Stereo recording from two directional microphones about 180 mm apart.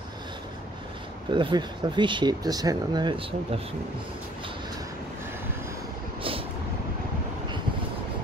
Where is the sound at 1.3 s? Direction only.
25° right (ahead or behind).